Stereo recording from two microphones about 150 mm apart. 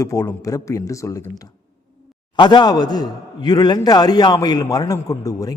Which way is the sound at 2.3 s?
30° left (ahead or behind).